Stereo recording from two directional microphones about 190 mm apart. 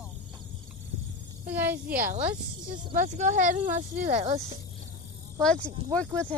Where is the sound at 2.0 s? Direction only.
40° right (ahead or behind).